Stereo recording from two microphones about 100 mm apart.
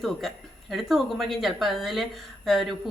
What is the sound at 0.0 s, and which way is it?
Speech, centre (ahead or behind).